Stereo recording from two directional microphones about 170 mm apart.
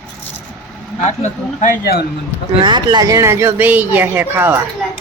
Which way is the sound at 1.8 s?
65° left (ahead or behind).